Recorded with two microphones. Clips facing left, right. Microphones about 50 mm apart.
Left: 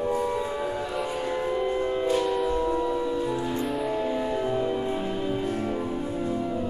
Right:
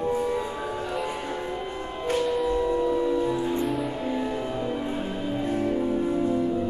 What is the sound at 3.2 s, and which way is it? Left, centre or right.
Music, right.